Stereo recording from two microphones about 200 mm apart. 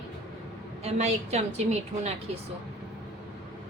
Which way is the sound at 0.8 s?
35° right (ahead or behind).